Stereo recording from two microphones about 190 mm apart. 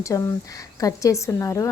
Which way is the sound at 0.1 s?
15° left (ahead or behind).